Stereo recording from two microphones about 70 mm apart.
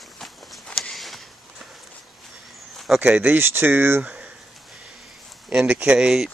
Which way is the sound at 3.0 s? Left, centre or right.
Right.